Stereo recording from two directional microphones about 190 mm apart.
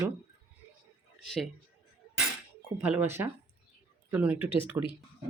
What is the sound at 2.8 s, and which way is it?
Speech, 10° right (ahead or behind).